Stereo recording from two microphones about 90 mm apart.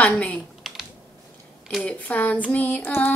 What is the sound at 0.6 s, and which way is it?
Computer keyboard, centre (ahead or behind).